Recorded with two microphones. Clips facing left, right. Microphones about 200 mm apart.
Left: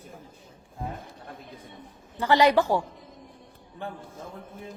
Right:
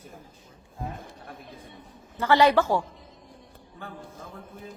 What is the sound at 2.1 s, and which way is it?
Speech, 15° left (ahead or behind).